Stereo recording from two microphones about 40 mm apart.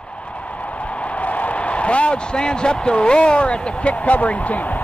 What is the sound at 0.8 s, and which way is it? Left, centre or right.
A man's voice, left.